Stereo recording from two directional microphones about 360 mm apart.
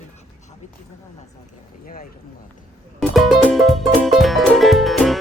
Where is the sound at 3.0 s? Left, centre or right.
Centre.